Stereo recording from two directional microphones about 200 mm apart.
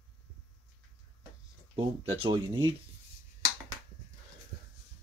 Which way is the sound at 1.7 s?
25° right (ahead or behind).